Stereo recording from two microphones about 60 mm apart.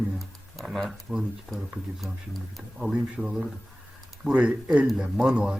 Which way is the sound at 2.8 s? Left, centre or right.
Centre.